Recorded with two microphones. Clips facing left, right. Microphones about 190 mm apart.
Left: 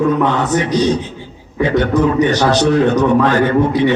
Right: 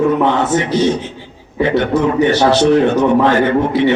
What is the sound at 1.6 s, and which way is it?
A man's voice, 20° right (ahead or behind).